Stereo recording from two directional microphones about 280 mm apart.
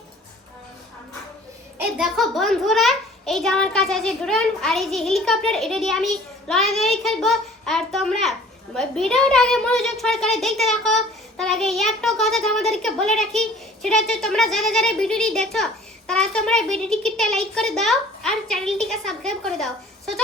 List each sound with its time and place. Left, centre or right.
2.0 s a child's voice: centre